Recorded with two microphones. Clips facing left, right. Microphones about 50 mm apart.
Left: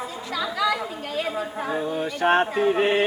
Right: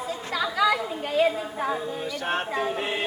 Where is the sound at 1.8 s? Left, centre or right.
Left.